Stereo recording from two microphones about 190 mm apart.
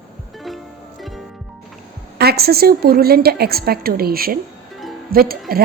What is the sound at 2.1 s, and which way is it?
A woman's voice, 55° right (ahead or behind).